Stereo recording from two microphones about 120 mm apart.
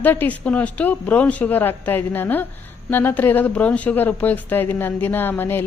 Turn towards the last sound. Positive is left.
turn(degrees=15)  # may be behind; listen again after turning